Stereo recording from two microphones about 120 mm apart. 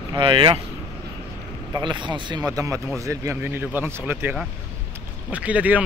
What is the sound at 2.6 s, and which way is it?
Speech, 25° right (ahead or behind).